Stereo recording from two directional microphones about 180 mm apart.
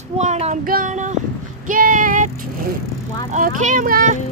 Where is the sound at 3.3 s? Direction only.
45° right (ahead or behind).